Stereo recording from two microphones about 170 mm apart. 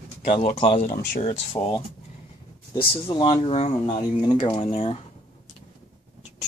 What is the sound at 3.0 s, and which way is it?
Speech, 30° left (ahead or behind).